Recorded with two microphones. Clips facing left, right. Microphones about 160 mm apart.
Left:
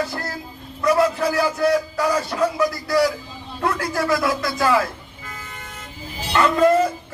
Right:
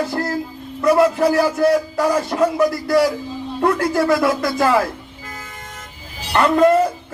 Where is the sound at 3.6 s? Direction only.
55° right (ahead or behind).